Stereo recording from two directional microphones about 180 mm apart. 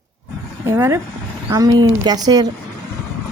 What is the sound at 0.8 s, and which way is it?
Speech, 15° right (ahead or behind).